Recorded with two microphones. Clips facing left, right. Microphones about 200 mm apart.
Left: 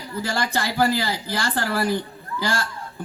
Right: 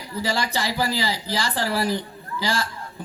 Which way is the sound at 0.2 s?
55° left (ahead or behind).